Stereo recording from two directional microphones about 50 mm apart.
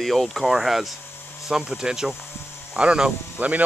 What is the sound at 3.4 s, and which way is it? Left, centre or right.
Speech, right.